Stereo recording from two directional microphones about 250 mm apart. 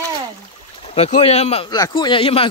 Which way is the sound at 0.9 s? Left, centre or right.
Left.